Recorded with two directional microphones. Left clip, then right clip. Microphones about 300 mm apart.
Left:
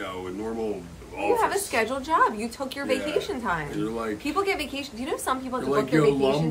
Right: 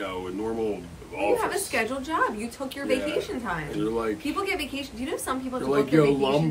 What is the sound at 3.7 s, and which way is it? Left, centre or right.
Speech, centre.